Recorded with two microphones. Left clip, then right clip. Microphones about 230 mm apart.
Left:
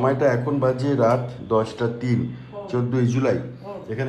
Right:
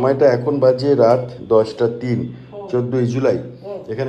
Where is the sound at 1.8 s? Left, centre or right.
Right.